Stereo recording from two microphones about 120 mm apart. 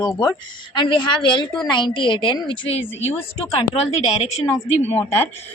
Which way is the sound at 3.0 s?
55° left (ahead or behind).